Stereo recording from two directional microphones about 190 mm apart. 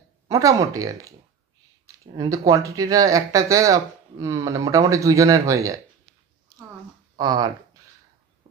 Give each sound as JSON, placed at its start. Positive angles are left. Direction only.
{"t": 0.3, "sound": "speech", "side_deg": -15}
{"t": 2.1, "sound": "speech", "side_deg": -15}
{"t": 7.2, "sound": "speech", "side_deg": -20}